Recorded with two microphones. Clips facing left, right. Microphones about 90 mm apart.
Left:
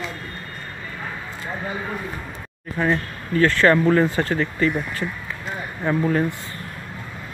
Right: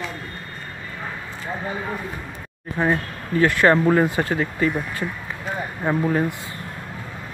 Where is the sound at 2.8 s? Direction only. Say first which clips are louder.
Even; 15° right (ahead or behind).